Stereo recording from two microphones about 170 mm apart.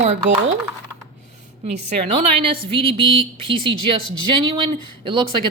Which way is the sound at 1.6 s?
40° right (ahead or behind).